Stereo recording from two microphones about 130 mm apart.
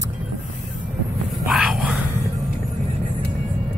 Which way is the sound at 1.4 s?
5° right (ahead or behind).